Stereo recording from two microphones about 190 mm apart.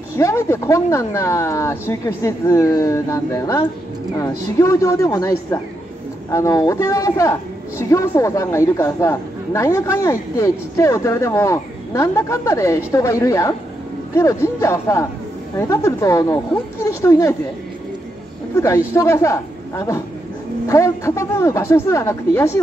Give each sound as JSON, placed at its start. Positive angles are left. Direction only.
{"t": 0.1, "sound": "a man's voice", "side_deg": 15}
{"t": 18.6, "sound": "a man's voice", "side_deg": 15}